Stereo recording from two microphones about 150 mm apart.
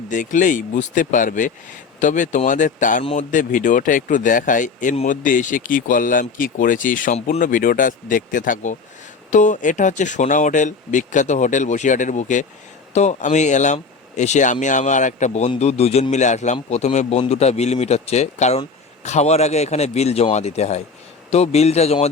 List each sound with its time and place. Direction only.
0.1 s a man's voice: 60° left (ahead or behind); by 22.1 s 45° left (ahead or behind)